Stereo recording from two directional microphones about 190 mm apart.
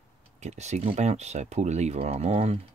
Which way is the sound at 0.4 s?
35° right (ahead or behind).